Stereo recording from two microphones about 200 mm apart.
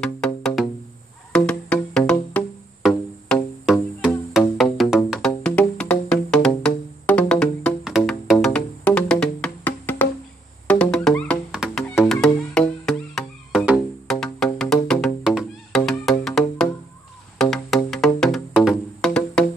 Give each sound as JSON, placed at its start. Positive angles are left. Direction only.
{"t": 0.0, "sound": "music", "side_deg": 5}